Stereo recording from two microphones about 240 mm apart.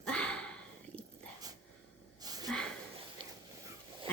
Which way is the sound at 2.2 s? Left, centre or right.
Centre.